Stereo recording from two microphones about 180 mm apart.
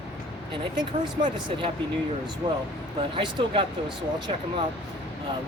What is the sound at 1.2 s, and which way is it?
Speech, 25° right (ahead or behind).